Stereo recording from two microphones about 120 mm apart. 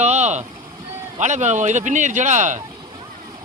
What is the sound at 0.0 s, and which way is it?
Vehicle, 70° right (ahead or behind).